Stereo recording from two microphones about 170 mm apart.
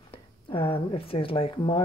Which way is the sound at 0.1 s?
30° left (ahead or behind).